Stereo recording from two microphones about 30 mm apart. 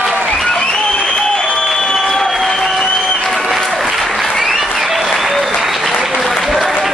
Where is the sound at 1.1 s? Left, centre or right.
Left.